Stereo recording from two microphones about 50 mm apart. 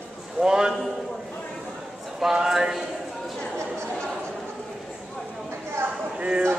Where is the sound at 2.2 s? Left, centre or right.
Centre.